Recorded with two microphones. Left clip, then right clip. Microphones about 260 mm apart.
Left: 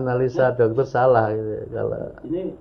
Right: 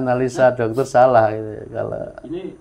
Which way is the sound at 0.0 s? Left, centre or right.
Right.